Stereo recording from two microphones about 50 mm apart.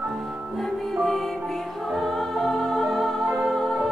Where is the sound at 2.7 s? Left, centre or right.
Centre.